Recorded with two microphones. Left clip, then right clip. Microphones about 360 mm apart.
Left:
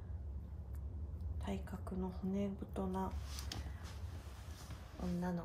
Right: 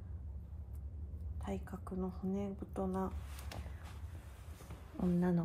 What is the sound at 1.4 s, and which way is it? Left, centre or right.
Speech, centre.